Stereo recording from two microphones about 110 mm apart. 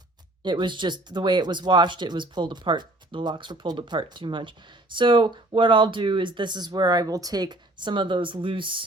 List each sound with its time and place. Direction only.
0.4 s speech: 45° right (ahead or behind)